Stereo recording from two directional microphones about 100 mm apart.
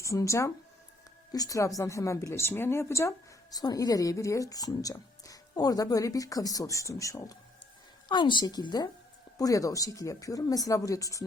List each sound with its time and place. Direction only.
0.0 s a woman's voice: 30° left (ahead or behind)
8.0 s a woman's voice: 50° left (ahead or behind); by 11.3 s 35° left (ahead or behind)